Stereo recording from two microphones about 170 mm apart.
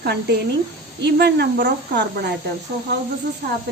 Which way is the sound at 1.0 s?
85° right.